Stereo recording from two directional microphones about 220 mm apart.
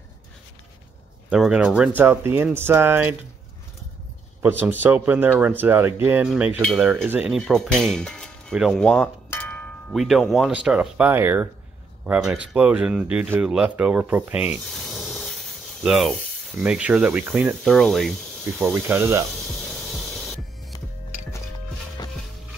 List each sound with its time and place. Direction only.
1.3 s cutlery: 5° right (ahead or behind)
2.0 s speech: 10° right (ahead or behind)
4.4 s speech: 10° right (ahead or behind)
6.0 s cutlery: 5° right (ahead or behind)
12.1 s speech: 5° right (ahead or behind)
19.3 s spray: centre (ahead or behind)
22.0 s music: 15° left (ahead or behind)